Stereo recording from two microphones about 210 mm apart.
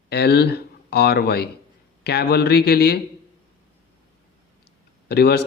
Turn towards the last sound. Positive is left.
turn(degrees=50)  # may be behind; listen again after turning